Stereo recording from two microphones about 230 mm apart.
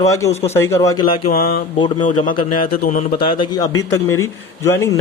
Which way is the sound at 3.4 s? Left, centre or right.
Centre.